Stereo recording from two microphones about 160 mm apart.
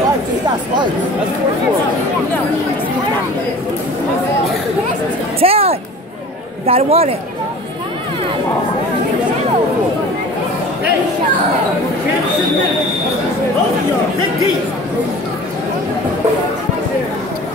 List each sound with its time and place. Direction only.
5.4 s music: 35° right (ahead or behind)
6.6 s speech: 40° right (ahead or behind)